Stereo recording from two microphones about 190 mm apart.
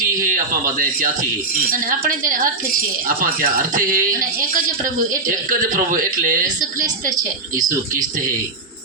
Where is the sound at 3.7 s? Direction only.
45° right (ahead or behind).